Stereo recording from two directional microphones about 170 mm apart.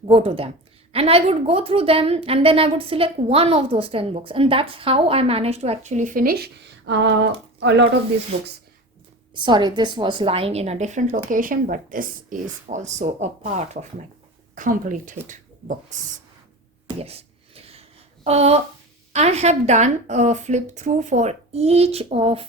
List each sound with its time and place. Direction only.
0.1 s a woman's voice: 35° right (ahead or behind); by 7.9 s 90° right
9.3 s a woman's voice: 25° right (ahead or behind); by 16.0 s 50° right (ahead or behind)
16.9 s a sound: 35° right (ahead or behind)
19.1 s a woman's voice: 40° right (ahead or behind)